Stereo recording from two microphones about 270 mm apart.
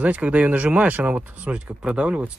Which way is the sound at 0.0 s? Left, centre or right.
Centre.